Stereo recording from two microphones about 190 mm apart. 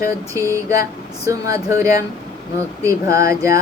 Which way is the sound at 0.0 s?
15° right (ahead or behind).